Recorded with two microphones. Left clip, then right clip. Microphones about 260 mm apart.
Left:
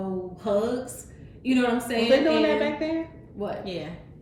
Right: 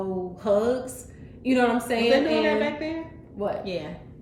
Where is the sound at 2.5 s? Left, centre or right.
Centre.